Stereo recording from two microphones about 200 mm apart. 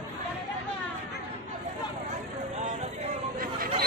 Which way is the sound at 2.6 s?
40° right (ahead or behind).